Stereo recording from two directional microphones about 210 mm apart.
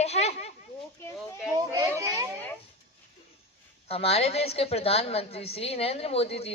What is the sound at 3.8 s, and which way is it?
A woman's voice, 30° left (ahead or behind).